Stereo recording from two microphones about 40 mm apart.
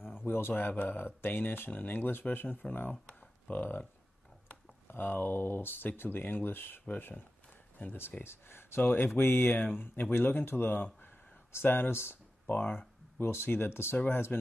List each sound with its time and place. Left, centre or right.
0.2 s speech: left
0.7 s speech: left
3.2 s a sound: left
4.8 s speech: left
8.2 s speech: left
9.6 s speech: left
13.2 s speech: left
13.9 s speech: left